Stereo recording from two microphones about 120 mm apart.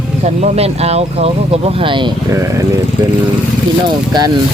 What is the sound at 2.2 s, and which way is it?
Speech, 25° right (ahead or behind).